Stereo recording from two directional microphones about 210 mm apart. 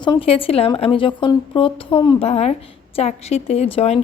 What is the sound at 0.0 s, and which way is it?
A woman's voice, 25° left (ahead or behind).